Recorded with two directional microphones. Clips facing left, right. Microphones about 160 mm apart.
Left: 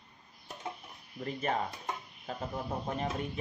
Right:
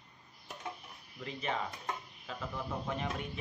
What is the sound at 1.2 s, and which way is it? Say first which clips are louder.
Speech: left 4 dB; 45° left (ahead or behind).